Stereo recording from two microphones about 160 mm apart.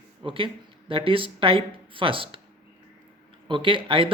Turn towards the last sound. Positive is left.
turn(degrees=-35)  # may be behind; listen again after turning